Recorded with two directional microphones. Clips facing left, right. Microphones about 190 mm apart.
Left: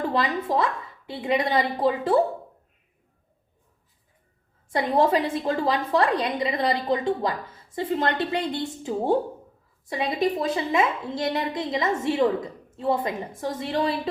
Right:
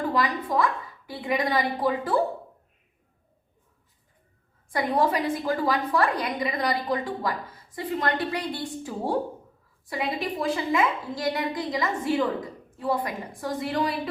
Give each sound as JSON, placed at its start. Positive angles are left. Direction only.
{"t": 0.1, "sound": "a woman's voice", "side_deg": 25}
{"t": 4.7, "sound": "a woman's voice", "side_deg": 25}